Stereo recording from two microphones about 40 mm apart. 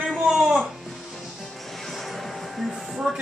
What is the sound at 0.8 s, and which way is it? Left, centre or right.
Music, centre.